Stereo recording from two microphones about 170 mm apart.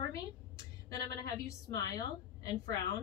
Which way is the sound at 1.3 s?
20° left (ahead or behind).